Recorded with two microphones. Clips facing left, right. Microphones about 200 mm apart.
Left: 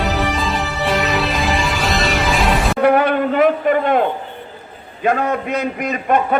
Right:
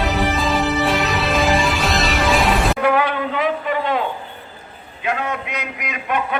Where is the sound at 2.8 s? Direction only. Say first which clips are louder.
Left 4 dB; 55° left (ahead or behind).